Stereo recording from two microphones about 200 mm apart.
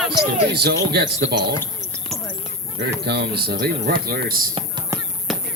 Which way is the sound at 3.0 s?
55° right (ahead or behind).